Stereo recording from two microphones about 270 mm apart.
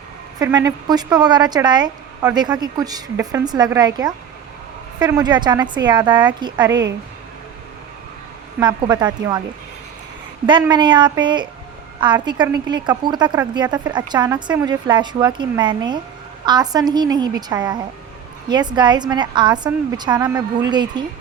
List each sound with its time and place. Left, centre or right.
0.3 s a woman's voice: centre
8.5 s a woman's voice: centre
10.4 s a woman's voice: centre